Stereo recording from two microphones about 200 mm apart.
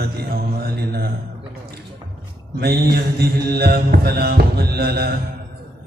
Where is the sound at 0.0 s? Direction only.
50° right (ahead or behind).